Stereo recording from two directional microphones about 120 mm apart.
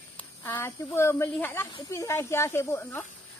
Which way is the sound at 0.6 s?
25° left (ahead or behind).